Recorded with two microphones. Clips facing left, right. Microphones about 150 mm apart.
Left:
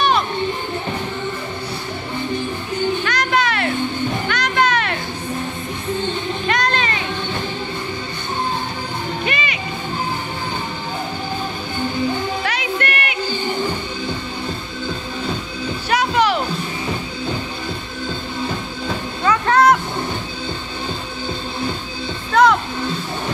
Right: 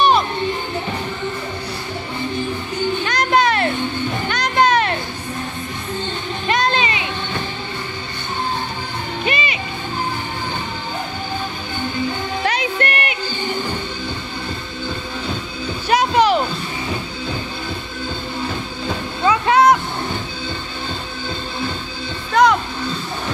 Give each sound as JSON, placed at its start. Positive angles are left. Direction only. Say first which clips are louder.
{"t": 3.1, "sound": "music", "louder": "right 3 dB", "side_deg": -35}
{"t": 6.5, "sound": "music", "louder": "right 3 dB", "side_deg": -25}
{"t": 9.2, "sound": "music", "louder": "right 5 dB", "side_deg": -25}
{"t": 12.4, "sound": "music", "louder": "right 2 dB", "side_deg": -30}
{"t": 15.9, "sound": "music", "louder": "right 3 dB", "side_deg": -25}
{"t": 19.2, "sound": "music", "louder": "right 1 dB", "side_deg": -10}
{"t": 22.3, "sound": "music", "louder": "even", "side_deg": 0}